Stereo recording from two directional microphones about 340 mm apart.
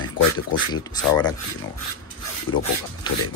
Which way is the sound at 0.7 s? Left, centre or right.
Centre.